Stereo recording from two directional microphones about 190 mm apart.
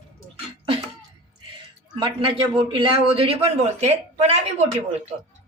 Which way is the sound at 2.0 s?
25° right (ahead or behind).